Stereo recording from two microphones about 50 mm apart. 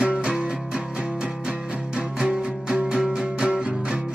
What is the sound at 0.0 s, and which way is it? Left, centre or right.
Music, centre.